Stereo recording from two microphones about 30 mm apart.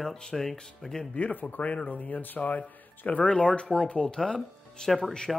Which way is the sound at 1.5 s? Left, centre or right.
Left.